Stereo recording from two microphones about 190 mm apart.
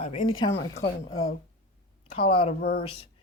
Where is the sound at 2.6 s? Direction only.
55° left (ahead or behind).